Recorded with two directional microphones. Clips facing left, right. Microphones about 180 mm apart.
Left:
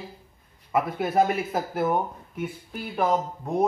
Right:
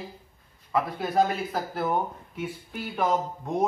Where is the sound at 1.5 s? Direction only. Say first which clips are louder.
Left 3 dB; 20° left (ahead or behind).